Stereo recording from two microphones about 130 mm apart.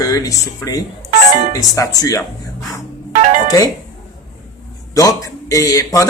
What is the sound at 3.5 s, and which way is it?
Speech, 30° left (ahead or behind).